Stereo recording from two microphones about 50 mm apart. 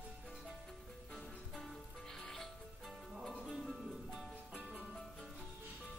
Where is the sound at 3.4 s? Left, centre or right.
Centre.